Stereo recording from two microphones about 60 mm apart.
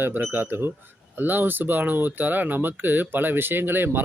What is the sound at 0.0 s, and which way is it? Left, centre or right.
Speech, right.